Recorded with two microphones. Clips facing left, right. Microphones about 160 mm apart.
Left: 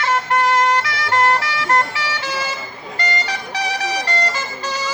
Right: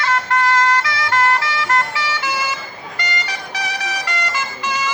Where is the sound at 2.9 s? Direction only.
35° left (ahead or behind).